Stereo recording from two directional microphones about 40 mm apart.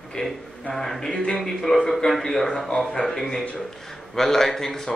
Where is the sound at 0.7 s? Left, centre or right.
Centre.